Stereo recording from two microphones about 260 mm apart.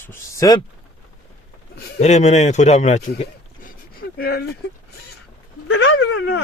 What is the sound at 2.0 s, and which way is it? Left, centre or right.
Speech, left.